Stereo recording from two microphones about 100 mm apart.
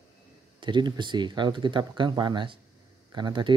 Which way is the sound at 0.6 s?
50° right (ahead or behind).